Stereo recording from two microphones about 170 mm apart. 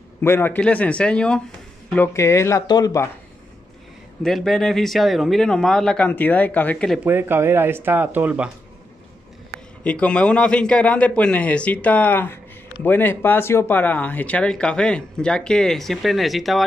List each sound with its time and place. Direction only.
0.2 s a man's voice: 15° left (ahead or behind)
4.2 s speech: centre (ahead or behind)
7.1 s speech: 10° right (ahead or behind)
9.8 s a man's voice: 5° left (ahead or behind)